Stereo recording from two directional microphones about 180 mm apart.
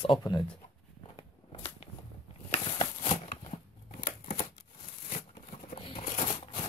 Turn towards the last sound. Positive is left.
turn(degrees=25)  # may be behind; listen again after turning